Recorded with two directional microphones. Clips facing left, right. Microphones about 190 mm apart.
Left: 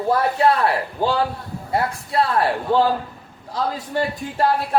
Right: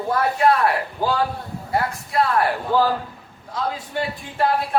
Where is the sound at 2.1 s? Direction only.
30° left (ahead or behind).